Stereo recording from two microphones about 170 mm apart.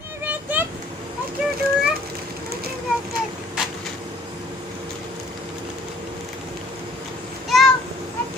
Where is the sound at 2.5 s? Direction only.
65° right (ahead or behind).